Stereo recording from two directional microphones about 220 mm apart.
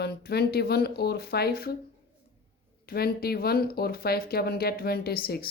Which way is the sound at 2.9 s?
45° left (ahead or behind).